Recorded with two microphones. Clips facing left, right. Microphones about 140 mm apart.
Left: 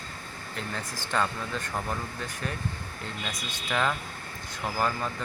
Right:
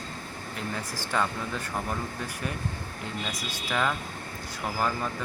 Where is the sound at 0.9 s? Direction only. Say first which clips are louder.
Even; 10° right (ahead or behind).